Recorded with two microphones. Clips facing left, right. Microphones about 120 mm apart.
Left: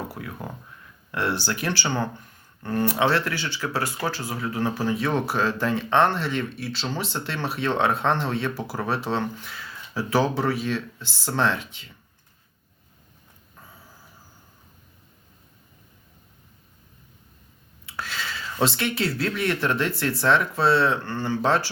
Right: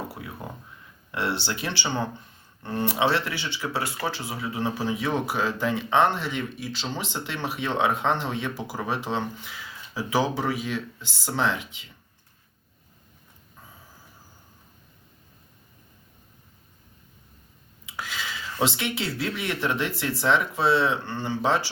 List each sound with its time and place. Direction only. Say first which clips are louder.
1.1 s speech: left 2 dB; 15° right (ahead or behind)
17.8 s speech: left 1 dB; 15° right (ahead or behind)